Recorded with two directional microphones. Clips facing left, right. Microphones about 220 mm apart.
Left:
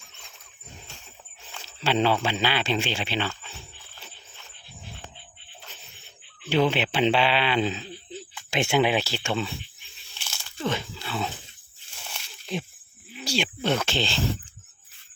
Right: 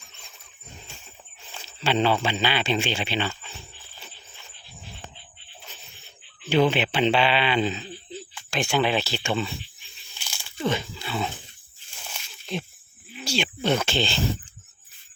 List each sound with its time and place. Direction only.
1.6 s a sound: 5° left (ahead or behind)
2.2 s speech: 5° left (ahead or behind)
3.9 s wild animals: 5° right (ahead or behind)
6.5 s speech: 5° right (ahead or behind)
8.4 s speech: 20° left (ahead or behind)
8.8 s speech: 10° left (ahead or behind)
10.2 s a sound: 10° right (ahead or behind)
13.2 s speech: 5° left (ahead or behind)